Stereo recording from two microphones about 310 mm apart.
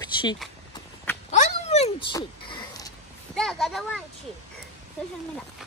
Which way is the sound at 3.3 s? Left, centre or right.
Centre.